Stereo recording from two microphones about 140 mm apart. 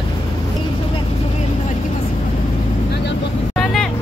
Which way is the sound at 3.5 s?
Centre (ahead or behind).